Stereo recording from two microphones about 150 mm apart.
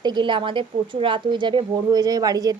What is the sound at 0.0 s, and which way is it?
A woman's voice, 30° right (ahead or behind).